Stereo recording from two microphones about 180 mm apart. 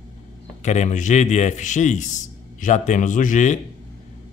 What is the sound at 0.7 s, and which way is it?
Speech, 40° left (ahead or behind).